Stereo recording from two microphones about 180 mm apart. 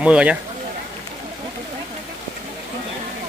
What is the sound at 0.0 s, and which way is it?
Speech, 5° right (ahead or behind).